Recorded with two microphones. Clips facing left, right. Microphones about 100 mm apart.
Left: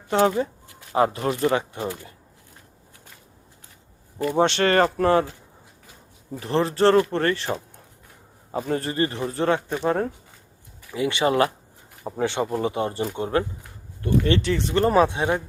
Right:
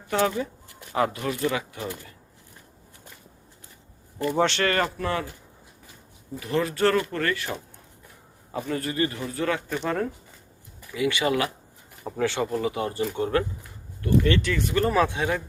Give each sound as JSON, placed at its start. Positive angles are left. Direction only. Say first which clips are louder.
{"t": 0.2, "sound": "speech", "louder": "left 5 dB", "side_deg": 40}
{"t": 4.3, "sound": "speech", "louder": "left 3 dB", "side_deg": 20}
{"t": 4.7, "sound": "speech", "louder": "left 7 dB", "side_deg": 40}
{"t": 6.4, "sound": "speech", "louder": "left 4 dB", "side_deg": 30}
{"t": 8.6, "sound": "speech", "louder": "left 2 dB", "side_deg": 35}
{"t": 12.0, "sound": "speech", "louder": "left 1 dB", "side_deg": 20}